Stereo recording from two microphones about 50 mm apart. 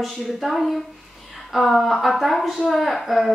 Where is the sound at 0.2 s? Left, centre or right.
Centre.